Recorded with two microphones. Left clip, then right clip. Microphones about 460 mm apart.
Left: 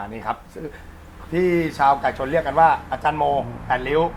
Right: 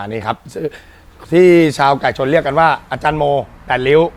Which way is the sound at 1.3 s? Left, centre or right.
Right.